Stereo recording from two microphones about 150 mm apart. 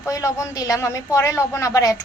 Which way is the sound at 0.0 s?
20° left (ahead or behind).